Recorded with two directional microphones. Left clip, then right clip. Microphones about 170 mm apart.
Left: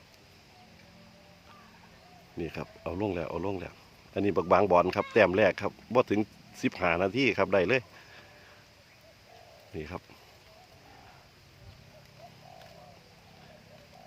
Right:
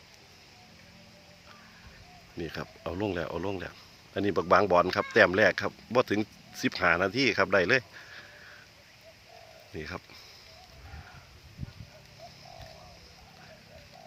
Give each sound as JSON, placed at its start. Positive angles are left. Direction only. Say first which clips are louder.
{"t": 2.4, "sound": "speech", "louder": "even", "side_deg": 15}
{"t": 2.8, "sound": "speech", "louder": "even", "side_deg": 5}
{"t": 9.7, "sound": "speech", "louder": "right 1 dB", "side_deg": 15}